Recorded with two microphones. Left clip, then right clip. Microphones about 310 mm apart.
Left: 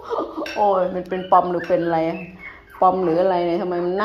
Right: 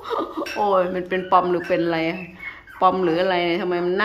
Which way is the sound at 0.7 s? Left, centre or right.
Centre.